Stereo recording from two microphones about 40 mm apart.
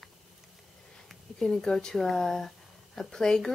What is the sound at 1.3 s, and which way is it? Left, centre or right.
Speech, centre.